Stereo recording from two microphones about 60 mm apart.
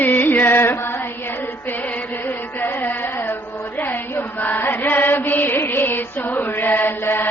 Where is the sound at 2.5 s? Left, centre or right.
Left.